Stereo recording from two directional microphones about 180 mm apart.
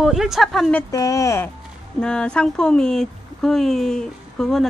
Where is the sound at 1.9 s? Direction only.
5° left (ahead or behind).